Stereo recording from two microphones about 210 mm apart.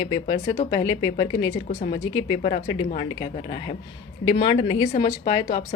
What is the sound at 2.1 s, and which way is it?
Speech, 25° left (ahead or behind).